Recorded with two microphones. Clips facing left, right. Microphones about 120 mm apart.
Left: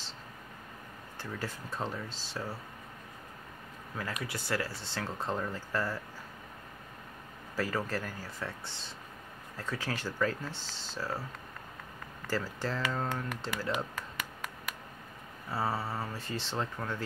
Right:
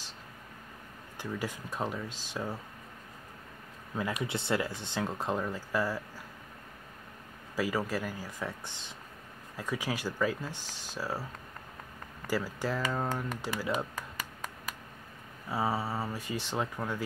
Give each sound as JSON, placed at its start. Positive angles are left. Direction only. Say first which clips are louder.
{"t": 1.1, "sound": "speech", "louder": "right 3 dB", "side_deg": -15}
{"t": 3.9, "sound": "speech", "louder": "right 5 dB", "side_deg": -20}
{"t": 7.5, "sound": "speech", "louder": "right 2 dB", "side_deg": -10}
{"t": 12.3, "sound": "speech", "louder": "right 2 dB", "side_deg": -10}
{"t": 15.5, "sound": "speech", "louder": "right 2 dB", "side_deg": -10}